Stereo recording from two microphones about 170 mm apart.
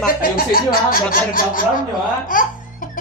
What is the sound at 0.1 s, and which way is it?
Speech, 60° left (ahead or behind).